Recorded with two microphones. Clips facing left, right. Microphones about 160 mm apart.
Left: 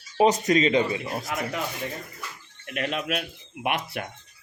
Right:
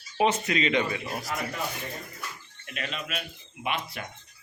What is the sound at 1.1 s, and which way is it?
Speech, 20° left (ahead or behind).